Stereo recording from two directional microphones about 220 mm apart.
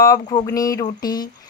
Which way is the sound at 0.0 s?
15° left (ahead or behind).